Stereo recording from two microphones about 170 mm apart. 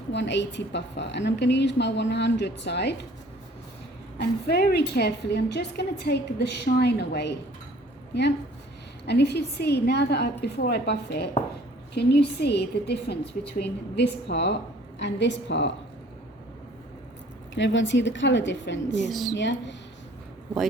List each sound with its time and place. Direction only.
0.1 s a woman's voice: 90° left
4.2 s a woman's voice: 70° left (ahead or behind)
9.0 s a woman's voice: 75° left (ahead or behind); by 15.7 s 90° left
17.5 s a woman's voice: 90° left
19.0 s a woman's voice: centre (ahead or behind)
19.3 s a woman's voice: 90° left